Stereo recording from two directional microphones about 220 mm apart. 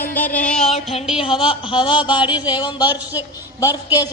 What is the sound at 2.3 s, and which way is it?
Speech, 5° right (ahead or behind).